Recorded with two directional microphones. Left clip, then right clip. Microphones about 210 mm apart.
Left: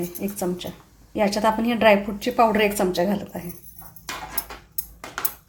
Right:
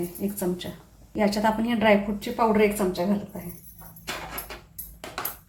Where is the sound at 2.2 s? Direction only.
45° left (ahead or behind).